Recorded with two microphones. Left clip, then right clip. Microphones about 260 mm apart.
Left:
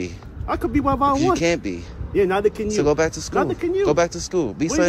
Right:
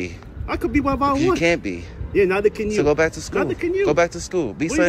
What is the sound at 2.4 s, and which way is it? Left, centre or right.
Speech, left.